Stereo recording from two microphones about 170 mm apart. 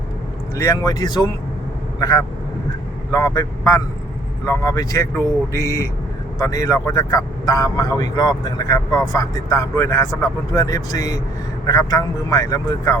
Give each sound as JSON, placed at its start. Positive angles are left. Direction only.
{"t": 0.5, "sound": "a man's voice", "side_deg": 20}